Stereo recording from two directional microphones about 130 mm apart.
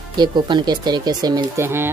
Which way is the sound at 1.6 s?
15° right (ahead or behind).